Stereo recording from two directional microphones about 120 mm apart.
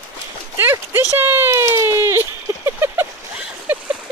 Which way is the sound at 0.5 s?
20° right (ahead or behind).